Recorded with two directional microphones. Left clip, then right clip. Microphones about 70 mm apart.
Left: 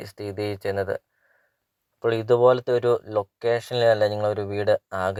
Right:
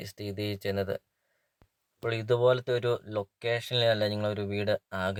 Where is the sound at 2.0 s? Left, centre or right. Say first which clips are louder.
Left 7 dB; left.